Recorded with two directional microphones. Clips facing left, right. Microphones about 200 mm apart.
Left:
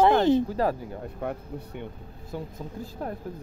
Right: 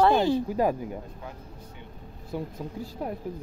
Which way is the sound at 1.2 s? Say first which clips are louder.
Left 9 dB; 60° left (ahead or behind).